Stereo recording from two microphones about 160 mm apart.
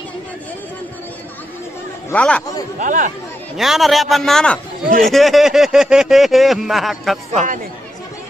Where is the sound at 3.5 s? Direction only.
Centre (ahead or behind).